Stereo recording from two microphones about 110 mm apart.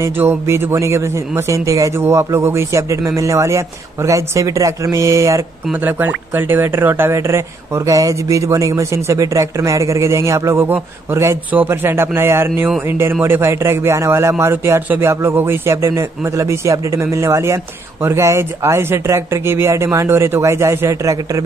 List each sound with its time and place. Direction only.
0.0 s speech: 20° right (ahead or behind)
5.7 s speech: 15° right (ahead or behind)